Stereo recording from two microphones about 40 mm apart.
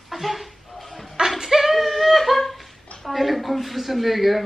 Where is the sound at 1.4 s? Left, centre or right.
Centre.